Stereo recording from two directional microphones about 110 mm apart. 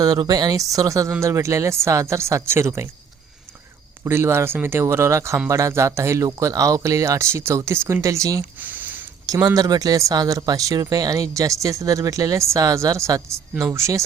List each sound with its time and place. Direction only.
0.0 s speech: 35° right (ahead or behind)
4.0 s speech: 25° right (ahead or behind)
8.6 s a sound: 15° right (ahead or behind)
9.2 s speech: 35° right (ahead or behind)